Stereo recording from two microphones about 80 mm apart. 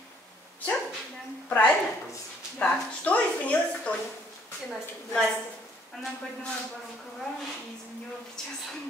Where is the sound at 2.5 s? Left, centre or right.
Centre.